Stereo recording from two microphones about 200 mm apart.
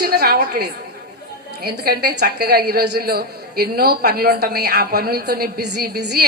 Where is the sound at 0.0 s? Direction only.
50° right (ahead or behind).